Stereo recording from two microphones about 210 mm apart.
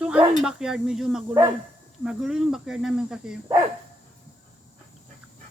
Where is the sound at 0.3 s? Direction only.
5° right (ahead or behind).